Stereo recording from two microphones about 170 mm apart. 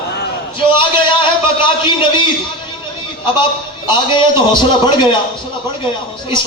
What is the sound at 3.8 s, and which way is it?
Speech, 25° left (ahead or behind).